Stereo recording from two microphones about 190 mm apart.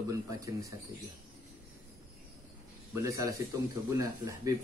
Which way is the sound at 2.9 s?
15° right (ahead or behind).